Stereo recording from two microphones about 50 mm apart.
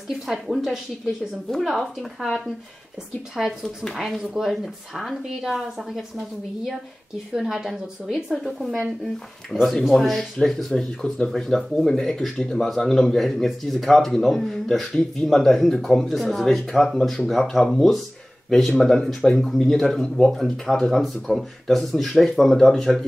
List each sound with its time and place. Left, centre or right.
0.3 s a woman's voice: centre
9.0 s speech: centre